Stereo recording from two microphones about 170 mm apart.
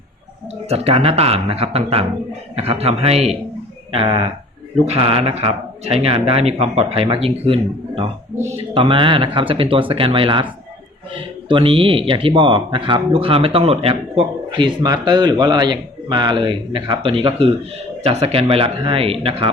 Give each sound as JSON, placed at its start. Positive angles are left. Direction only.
{"t": 0.7, "sound": "speech", "side_deg": -35}
{"t": 8.3, "sound": "speech", "side_deg": -10}
{"t": 8.7, "sound": "speech", "side_deg": -30}